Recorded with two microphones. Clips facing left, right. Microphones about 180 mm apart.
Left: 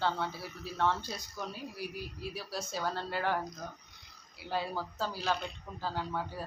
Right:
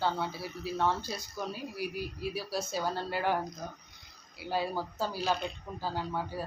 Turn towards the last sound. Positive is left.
turn(degrees=-10)  # may be behind; listen again after turning